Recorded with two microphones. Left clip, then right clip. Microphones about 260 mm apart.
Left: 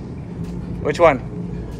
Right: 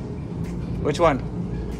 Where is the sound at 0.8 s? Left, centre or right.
Centre.